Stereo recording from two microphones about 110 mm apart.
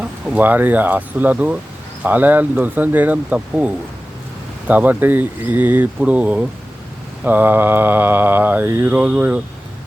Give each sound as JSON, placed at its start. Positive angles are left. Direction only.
{"t": 0.0, "sound": "speech", "side_deg": -15}
{"t": 4.7, "sound": "speech", "side_deg": -15}
{"t": 7.3, "sound": "mantra", "side_deg": -15}